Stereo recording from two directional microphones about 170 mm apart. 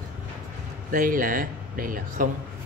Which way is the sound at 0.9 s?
50° right (ahead or behind).